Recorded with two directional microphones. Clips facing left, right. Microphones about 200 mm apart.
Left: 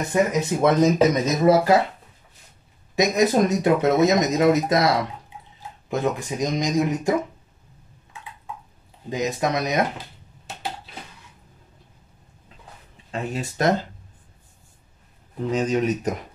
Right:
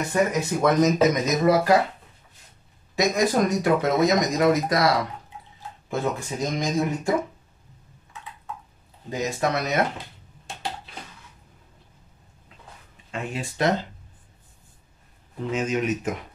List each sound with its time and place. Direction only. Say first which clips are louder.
0.1 s speech: left 3 dB; 25° left (ahead or behind)
3.0 s speech: left 3 dB; 20° left (ahead or behind)
5.9 s speech: left 3 dB; 15° left (ahead or behind)
9.1 s speech: left 2 dB; 15° left (ahead or behind)
13.1 s speech: left 3 dB; 40° left (ahead or behind)
15.5 s speech: left 3 dB; 35° left (ahead or behind)